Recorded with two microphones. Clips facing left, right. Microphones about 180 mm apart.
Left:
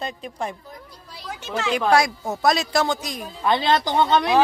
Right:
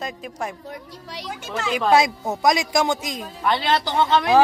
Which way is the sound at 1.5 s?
Centre (ahead or behind).